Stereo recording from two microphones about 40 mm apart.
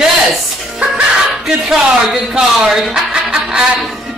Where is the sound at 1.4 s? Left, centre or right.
Centre.